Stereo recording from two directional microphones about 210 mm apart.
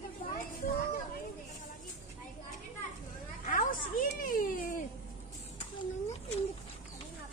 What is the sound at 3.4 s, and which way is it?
Children playing, 40° left (ahead or behind).